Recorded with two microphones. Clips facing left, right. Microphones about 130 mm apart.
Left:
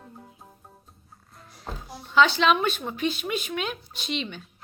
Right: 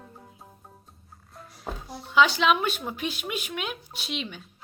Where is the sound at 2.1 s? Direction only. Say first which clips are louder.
Left 1 dB; 10° right (ahead or behind).